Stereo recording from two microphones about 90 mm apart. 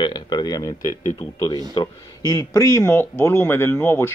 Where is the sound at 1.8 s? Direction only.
40° left (ahead or behind).